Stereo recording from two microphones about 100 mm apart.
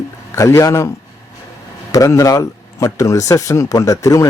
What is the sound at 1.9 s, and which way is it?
Speech, 35° left (ahead or behind).